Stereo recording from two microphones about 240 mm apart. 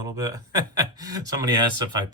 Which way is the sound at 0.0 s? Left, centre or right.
Centre.